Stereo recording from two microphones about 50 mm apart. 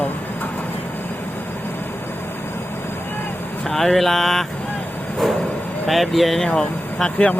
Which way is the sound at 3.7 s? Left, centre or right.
Centre.